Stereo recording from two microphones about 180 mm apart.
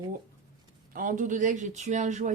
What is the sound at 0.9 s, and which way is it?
Speech, 45° right (ahead or behind).